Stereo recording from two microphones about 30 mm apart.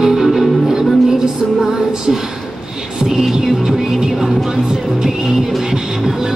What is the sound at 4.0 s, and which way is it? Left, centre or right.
Music, centre.